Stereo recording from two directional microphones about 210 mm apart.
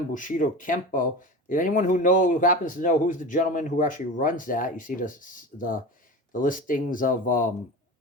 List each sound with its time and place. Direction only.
0.1 s speech: 40° left (ahead or behind)